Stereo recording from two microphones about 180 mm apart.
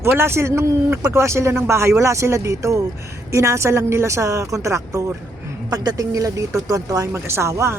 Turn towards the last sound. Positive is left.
turn(degrees=-15)  # may be behind; listen again after turning